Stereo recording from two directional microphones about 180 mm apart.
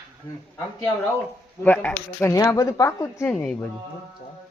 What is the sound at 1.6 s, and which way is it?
Speech, 10° left (ahead or behind).